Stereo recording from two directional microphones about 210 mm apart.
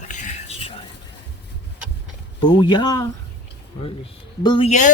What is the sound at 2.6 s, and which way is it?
Speech, 20° left (ahead or behind).